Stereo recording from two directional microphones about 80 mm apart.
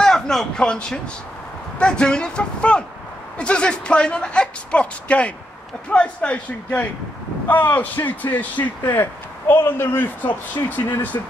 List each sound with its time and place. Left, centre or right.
0.0 s speech: centre; by 11.1 s left